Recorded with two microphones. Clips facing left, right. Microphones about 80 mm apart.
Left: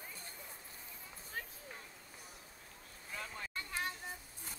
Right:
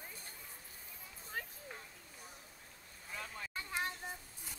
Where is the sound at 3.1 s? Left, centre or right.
Centre.